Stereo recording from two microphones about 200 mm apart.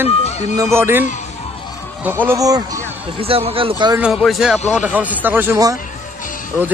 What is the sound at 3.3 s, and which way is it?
Speech, 30° right (ahead or behind).